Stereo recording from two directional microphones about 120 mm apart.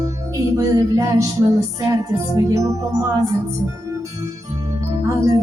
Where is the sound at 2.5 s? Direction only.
25° right (ahead or behind).